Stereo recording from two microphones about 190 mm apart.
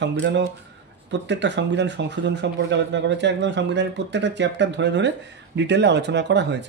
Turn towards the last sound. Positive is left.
turn(degrees=-65)  # may be behind; listen again after turning